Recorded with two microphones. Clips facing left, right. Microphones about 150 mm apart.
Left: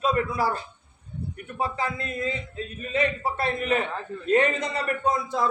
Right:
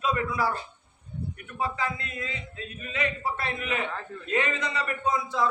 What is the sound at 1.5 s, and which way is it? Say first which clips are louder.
A man's voice: left 2 dB; 35° left (ahead or behind).